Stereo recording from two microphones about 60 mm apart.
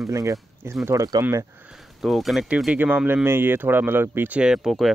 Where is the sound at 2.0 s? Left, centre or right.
Centre.